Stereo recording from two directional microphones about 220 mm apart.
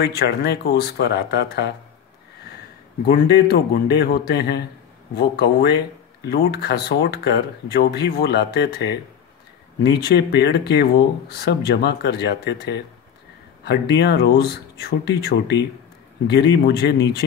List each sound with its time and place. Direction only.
0.0 s speech: 50° left (ahead or behind)
3.1 s speech: 45° left (ahead or behind)